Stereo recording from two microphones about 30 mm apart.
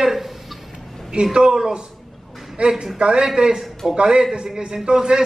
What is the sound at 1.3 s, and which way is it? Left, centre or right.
A man's voice, right.